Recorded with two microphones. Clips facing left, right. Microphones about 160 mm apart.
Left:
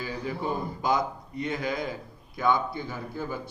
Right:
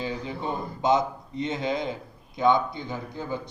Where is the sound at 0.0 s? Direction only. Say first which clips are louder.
Right 1 dB; 25° right (ahead or behind).